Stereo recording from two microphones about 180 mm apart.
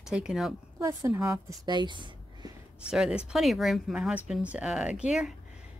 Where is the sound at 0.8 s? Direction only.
15° right (ahead or behind).